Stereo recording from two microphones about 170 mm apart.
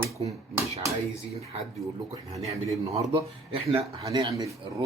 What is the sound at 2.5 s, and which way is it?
Speech, 20° right (ahead or behind).